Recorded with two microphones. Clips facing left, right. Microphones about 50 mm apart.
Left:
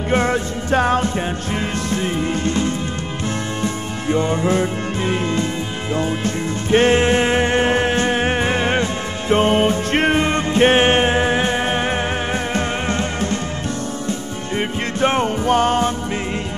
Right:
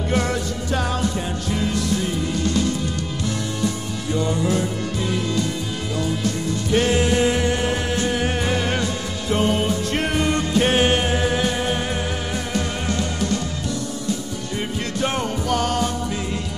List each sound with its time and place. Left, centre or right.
0.1 s music: left
14.6 s music: left